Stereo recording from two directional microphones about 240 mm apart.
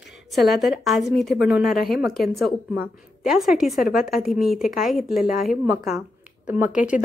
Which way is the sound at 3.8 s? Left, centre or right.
Left.